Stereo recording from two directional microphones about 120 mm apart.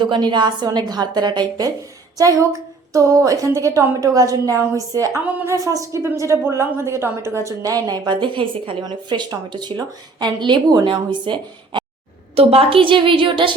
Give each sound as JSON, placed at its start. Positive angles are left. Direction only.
{"t": 0.0, "sound": "a woman's voice", "side_deg": -40}
{"t": 5.2, "sound": "a woman's voice", "side_deg": -15}
{"t": 5.6, "sound": "a woman's voice", "side_deg": -25}
{"t": 12.4, "sound": "a woman's voice", "side_deg": -50}